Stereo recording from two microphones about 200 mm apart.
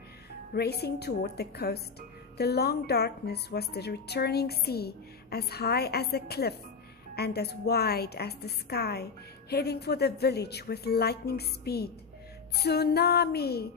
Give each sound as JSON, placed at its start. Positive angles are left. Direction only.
{"t": 0.5, "sound": "speech", "side_deg": 55}